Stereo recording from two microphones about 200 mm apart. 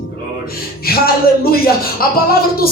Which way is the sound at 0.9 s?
50° left (ahead or behind).